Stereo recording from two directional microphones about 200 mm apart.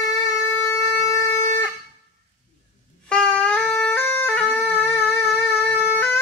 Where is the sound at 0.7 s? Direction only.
15° left (ahead or behind).